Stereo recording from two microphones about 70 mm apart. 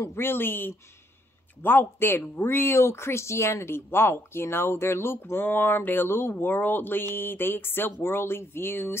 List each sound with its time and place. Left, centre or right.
0.1 s speech: left